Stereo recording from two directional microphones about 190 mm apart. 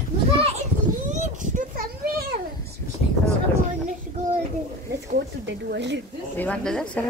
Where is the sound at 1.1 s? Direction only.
40° right (ahead or behind).